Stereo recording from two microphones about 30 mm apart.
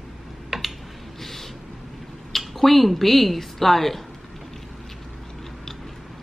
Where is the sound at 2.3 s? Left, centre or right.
Centre.